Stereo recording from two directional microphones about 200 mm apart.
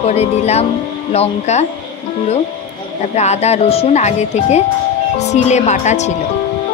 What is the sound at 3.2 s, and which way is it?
Speech, 35° left (ahead or behind).